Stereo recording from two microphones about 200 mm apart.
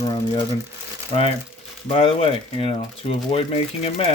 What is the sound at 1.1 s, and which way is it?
Speech, 30° left (ahead or behind).